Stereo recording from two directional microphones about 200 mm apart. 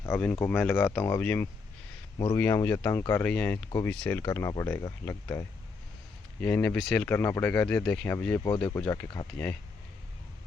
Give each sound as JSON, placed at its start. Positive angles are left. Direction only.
{"t": 0.0, "sound": "speech", "side_deg": 5}
{"t": 2.1, "sound": "speech", "side_deg": 20}
{"t": 2.4, "sound": "speech", "side_deg": 10}
{"t": 6.4, "sound": "speech", "side_deg": 10}
{"t": 8.4, "sound": "speech", "side_deg": 20}
{"t": 8.8, "sound": "speech", "side_deg": 5}